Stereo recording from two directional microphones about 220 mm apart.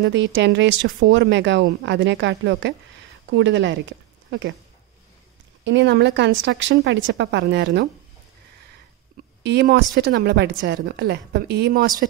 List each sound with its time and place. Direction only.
0.0 s speech: 55° right (ahead or behind)
5.6 s a woman's voice: 55° right (ahead or behind)
9.1 s a woman's voice: 50° right (ahead or behind)